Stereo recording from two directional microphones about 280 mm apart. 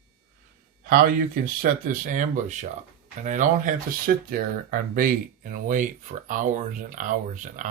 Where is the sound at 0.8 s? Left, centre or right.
Right.